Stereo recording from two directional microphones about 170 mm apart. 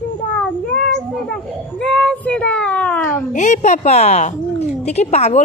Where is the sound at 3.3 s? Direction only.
45° left (ahead or behind).